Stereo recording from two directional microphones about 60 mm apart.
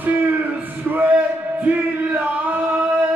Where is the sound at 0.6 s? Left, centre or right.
Right.